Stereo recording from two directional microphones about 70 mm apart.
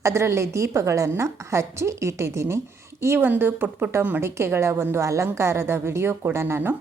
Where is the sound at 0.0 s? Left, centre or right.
Right.